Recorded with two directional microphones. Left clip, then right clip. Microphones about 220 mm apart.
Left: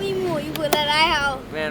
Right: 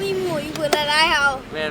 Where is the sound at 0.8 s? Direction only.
5° right (ahead or behind).